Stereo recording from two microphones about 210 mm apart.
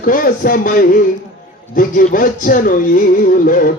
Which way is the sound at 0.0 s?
40° left (ahead or behind).